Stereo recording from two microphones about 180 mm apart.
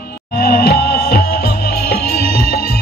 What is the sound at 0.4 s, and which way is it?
Music, 60° left (ahead or behind).